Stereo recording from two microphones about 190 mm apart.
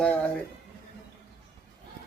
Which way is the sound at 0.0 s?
5° left (ahead or behind).